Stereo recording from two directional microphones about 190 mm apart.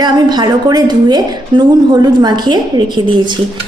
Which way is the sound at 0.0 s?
20° right (ahead or behind).